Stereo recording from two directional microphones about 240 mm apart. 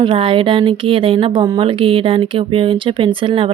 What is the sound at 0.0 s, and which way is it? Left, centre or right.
Speech, right.